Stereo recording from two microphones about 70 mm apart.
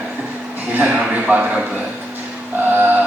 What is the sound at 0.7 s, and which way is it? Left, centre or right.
Speech, right.